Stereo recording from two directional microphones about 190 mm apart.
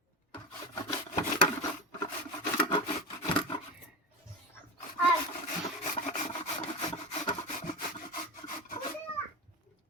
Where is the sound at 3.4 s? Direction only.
25° left (ahead or behind).